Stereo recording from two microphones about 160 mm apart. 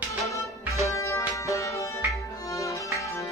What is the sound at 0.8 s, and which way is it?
Music, 20° left (ahead or behind).